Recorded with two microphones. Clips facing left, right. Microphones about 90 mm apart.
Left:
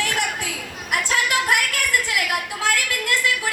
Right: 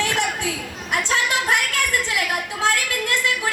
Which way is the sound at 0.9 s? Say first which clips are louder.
Even; 25° right (ahead or behind).